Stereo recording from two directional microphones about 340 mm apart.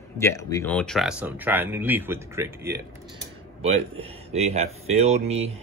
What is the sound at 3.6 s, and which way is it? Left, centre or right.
Speech, centre.